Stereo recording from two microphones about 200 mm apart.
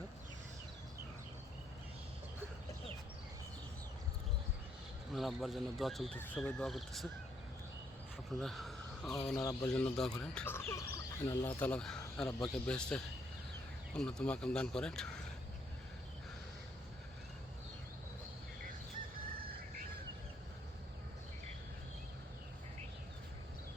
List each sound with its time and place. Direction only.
5.1 s speech: centre (ahead or behind)
8.4 s a sound: centre (ahead or behind)
9.4 s speech: 15° left (ahead or behind)
9.8 s speech: 5° left (ahead or behind)